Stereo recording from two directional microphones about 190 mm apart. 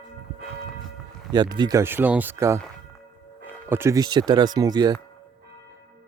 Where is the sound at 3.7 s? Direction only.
15° right (ahead or behind).